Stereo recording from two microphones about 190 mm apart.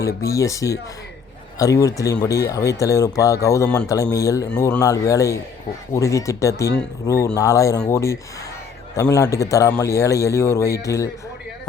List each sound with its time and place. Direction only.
0.0 s speech: 15° left (ahead or behind)